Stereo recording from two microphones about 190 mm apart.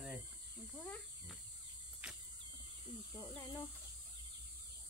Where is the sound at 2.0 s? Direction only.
5° right (ahead or behind).